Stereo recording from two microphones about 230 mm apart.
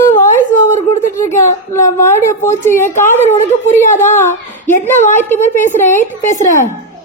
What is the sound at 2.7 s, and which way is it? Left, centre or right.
Speech, left.